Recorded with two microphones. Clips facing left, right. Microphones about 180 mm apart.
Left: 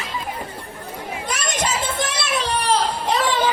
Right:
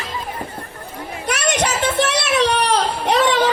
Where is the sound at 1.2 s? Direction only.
70° right (ahead or behind).